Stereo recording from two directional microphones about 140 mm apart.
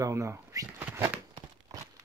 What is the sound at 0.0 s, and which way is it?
Speech, 20° right (ahead or behind).